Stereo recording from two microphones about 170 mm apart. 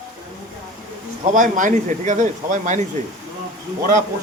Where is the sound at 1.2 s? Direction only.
50° right (ahead or behind).